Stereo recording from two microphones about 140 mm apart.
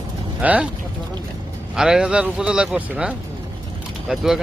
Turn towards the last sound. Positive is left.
turn(degrees=-5)  # may be behind; listen again after turning